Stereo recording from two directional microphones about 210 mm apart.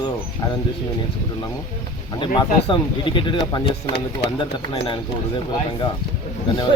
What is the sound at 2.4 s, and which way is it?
Speech, 20° left (ahead or behind).